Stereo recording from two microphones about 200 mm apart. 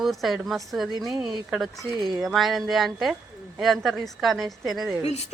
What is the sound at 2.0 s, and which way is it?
Speech, 20° right (ahead or behind).